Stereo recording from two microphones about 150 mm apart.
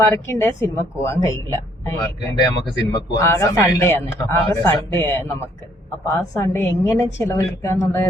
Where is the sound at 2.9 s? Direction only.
20° left (ahead or behind).